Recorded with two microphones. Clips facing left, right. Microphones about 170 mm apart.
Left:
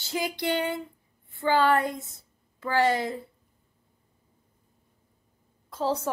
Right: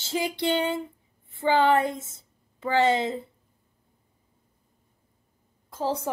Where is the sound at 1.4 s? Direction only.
20° right (ahead or behind).